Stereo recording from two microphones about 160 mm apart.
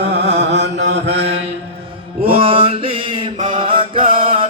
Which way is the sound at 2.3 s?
35° right (ahead or behind).